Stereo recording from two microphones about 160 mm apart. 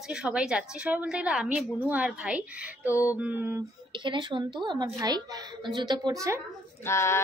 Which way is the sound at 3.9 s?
30° right (ahead or behind).